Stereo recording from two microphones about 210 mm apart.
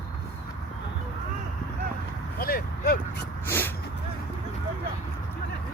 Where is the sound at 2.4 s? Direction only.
45° left (ahead or behind).